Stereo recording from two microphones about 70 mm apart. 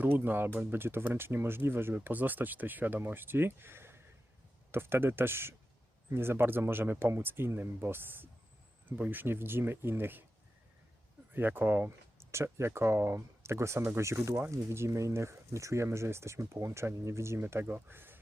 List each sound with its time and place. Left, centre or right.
0.0 s speech: right
11.3 s speech: right
17.4 s speech: right